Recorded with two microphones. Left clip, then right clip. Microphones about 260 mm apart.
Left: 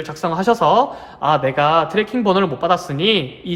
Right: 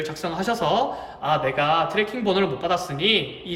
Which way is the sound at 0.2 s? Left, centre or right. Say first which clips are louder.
Left 10 dB; centre.